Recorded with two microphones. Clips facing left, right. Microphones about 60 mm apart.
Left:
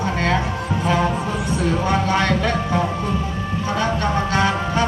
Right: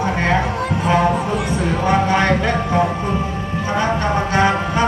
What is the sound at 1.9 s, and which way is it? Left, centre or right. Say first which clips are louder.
Music: right 5 dB; right.